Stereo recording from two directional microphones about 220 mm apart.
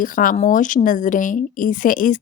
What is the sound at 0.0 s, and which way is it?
Speech, 40° left (ahead or behind).